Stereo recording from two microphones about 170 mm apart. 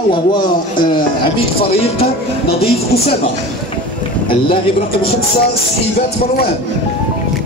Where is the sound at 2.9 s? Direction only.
65° left (ahead or behind).